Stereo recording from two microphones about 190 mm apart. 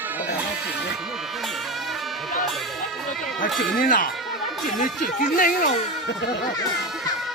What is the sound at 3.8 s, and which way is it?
Speech, 45° left (ahead or behind).